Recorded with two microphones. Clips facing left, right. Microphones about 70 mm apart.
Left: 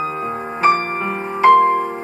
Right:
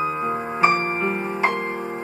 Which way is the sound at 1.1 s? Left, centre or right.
Left.